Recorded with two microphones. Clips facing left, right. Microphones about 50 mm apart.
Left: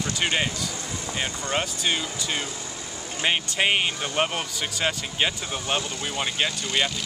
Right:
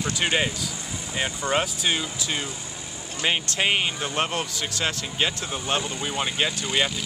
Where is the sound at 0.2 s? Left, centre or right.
Centre.